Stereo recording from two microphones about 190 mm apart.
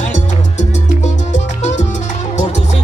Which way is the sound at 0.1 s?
40° left (ahead or behind).